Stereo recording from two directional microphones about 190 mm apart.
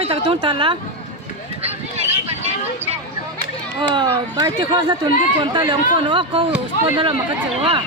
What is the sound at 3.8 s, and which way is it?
Speech, 25° right (ahead or behind).